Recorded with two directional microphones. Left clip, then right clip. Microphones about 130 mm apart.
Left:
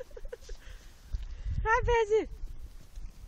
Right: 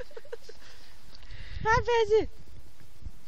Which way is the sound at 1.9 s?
50° right (ahead or behind).